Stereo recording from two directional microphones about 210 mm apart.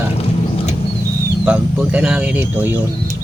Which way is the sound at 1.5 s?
5° right (ahead or behind).